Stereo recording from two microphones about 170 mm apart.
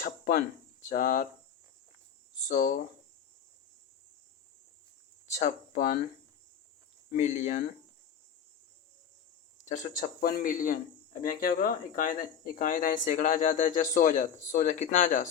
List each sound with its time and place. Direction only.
0.0 s speech: 55° left (ahead or behind)
2.5 s speech: 50° left (ahead or behind)
5.3 s speech: 45° left (ahead or behind)
7.2 s speech: 45° left (ahead or behind)
9.6 s speech: 45° left (ahead or behind)